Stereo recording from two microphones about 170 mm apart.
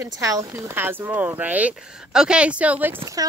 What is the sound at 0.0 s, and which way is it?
Speech, 20° right (ahead or behind).